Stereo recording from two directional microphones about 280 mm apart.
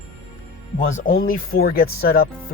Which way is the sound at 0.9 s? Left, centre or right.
Left.